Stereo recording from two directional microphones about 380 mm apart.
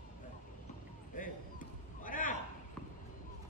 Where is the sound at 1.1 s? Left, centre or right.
Left.